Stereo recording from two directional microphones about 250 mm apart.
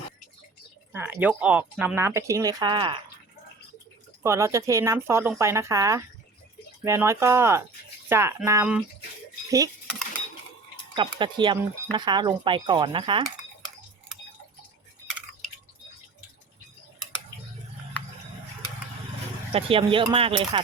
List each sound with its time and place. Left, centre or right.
0.9 s speech: centre
4.2 s speech: centre
10.9 s speech: centre
19.5 s speech: right